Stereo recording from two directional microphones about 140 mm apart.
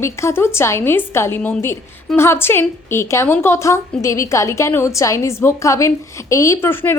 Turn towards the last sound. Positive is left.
turn(degrees=15)  # may be behind; listen again after turning